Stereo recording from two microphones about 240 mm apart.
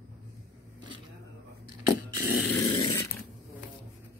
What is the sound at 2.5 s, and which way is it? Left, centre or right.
Dog, centre.